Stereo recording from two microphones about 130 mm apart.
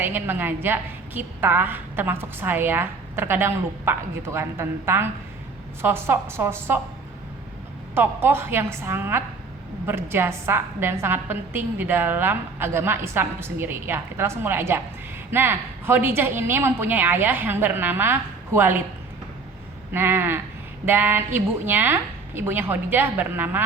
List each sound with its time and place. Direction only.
0.0 s a woman's voice: 15° right (ahead or behind)
7.9 s a woman's voice: 20° right (ahead or behind)
19.9 s a woman's voice: 15° right (ahead or behind)